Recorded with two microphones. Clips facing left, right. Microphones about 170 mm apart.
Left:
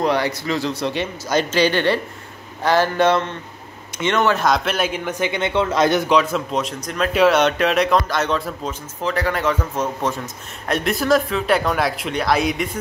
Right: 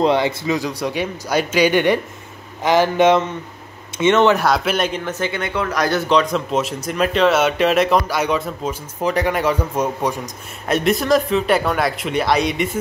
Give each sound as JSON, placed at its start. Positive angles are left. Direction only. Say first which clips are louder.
{"t": 0.0, "sound": "a man's voice", "louder": "right 3 dB", "side_deg": -20}
{"t": 4.4, "sound": "speech", "louder": "right 1 dB", "side_deg": -5}
{"t": 9.0, "sound": "a man's voice", "louder": "right 3 dB", "side_deg": -15}
{"t": 10.7, "sound": "speech", "louder": "right 2 dB", "side_deg": 0}